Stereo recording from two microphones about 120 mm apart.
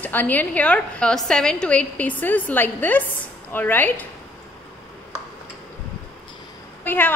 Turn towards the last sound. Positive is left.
turn(degrees=15)  # may be behind; listen again after turning